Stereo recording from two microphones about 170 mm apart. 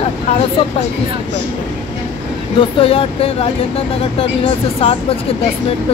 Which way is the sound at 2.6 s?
35° left (ahead or behind).